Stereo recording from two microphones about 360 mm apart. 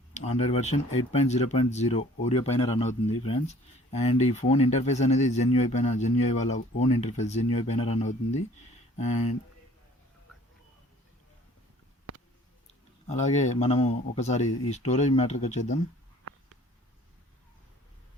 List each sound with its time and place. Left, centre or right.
0.1 s speech: centre
13.1 s speech: centre